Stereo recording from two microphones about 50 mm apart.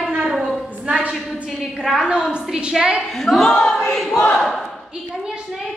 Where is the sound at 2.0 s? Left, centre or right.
Centre.